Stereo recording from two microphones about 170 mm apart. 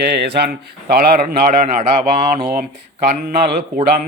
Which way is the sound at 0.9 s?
60° right (ahead or behind).